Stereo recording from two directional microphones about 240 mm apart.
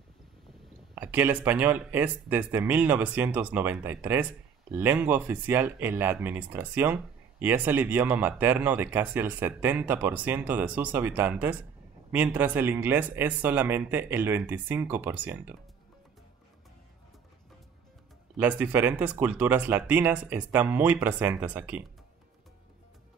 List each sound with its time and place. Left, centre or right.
0.9 s speech: centre
18.4 s speech: centre